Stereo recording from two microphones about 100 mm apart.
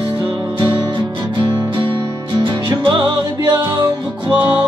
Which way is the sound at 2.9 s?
50° right (ahead or behind).